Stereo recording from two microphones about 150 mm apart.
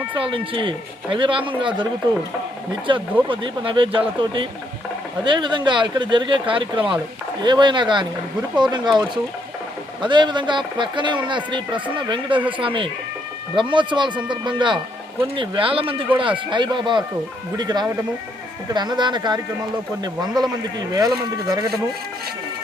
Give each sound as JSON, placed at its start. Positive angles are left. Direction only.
{"t": 0.1, "sound": "speech", "side_deg": -35}
{"t": 2.9, "sound": "speech", "side_deg": -35}